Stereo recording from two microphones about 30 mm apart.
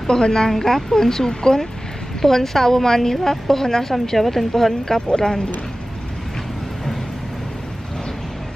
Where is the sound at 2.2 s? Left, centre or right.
Centre.